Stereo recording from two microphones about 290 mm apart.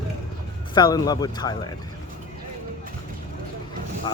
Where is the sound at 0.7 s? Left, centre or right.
Centre.